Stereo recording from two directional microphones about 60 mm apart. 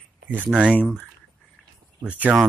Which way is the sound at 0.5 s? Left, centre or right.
Centre.